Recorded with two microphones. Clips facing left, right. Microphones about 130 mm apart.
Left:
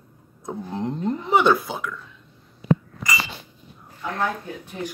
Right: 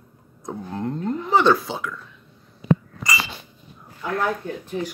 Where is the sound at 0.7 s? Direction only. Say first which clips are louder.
Even; 20° left (ahead or behind).